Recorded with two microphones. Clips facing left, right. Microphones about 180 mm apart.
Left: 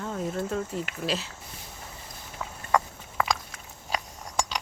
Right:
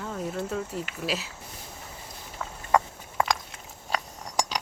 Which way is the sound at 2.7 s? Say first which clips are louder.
Right 2 dB; 25° right (ahead or behind).